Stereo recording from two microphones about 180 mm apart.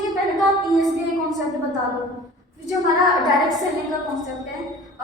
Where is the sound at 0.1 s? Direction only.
Centre (ahead or behind).